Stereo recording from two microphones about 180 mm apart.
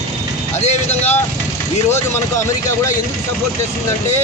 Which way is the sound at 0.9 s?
10° left (ahead or behind).